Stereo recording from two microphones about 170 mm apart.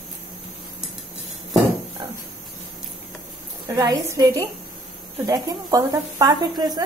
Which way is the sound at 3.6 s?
20° right (ahead or behind).